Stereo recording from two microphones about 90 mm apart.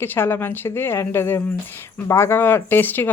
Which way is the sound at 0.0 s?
25° left (ahead or behind).